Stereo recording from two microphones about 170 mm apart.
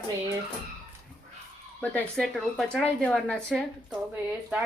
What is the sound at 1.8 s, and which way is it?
A woman's voice, 5° left (ahead or behind).